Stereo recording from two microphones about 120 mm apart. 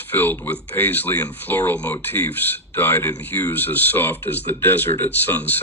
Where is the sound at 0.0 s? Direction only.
15° left (ahead or behind).